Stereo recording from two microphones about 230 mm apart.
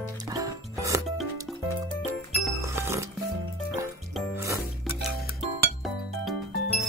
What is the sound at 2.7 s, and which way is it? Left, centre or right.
Music, centre.